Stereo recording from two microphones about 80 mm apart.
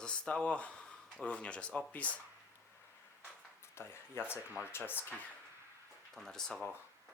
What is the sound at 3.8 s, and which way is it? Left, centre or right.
Speech, left.